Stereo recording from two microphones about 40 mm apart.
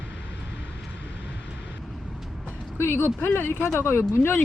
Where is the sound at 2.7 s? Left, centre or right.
Left.